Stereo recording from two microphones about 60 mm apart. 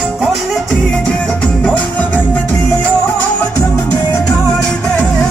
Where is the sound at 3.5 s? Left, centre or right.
Left.